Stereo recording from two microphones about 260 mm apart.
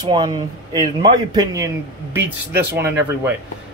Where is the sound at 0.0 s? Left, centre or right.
Centre.